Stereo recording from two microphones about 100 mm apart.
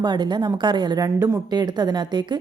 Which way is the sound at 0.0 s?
45° right (ahead or behind).